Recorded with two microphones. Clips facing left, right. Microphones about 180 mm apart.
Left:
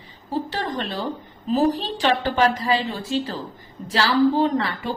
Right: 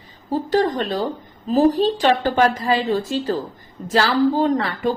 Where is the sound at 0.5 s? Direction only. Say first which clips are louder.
Right 8 dB; 45° right (ahead or behind).